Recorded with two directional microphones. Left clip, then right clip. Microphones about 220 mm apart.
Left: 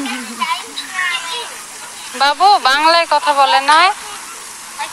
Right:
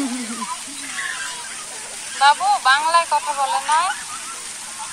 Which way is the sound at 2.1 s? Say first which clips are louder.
Left 4 dB; 40° left (ahead or behind).